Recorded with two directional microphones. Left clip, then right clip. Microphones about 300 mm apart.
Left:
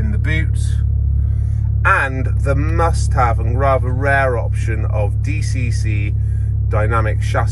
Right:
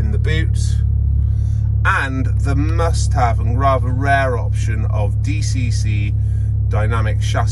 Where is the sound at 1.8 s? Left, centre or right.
Centre.